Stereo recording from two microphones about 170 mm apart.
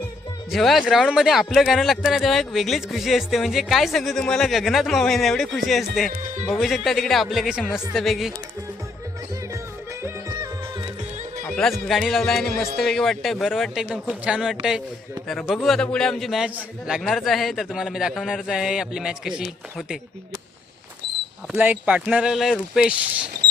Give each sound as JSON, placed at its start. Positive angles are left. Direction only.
{"t": 0.5, "sound": "speech", "side_deg": 0}
{"t": 6.1, "sound": "speech", "side_deg": -55}
{"t": 6.5, "sound": "speech", "side_deg": 0}
{"t": 10.0, "sound": "music", "side_deg": -20}
{"t": 11.4, "sound": "music", "side_deg": 5}
{"t": 11.9, "sound": "speech", "side_deg": 0}
{"t": 21.5, "sound": "speech", "side_deg": -10}